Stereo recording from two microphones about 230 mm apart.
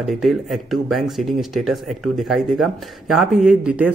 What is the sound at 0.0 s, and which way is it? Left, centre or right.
Speech, centre.